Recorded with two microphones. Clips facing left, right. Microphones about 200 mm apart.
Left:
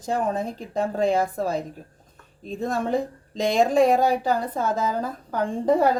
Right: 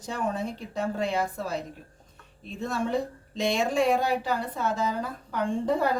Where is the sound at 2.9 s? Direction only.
90° left.